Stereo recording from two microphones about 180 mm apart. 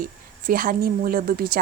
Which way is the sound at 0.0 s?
50° right (ahead or behind).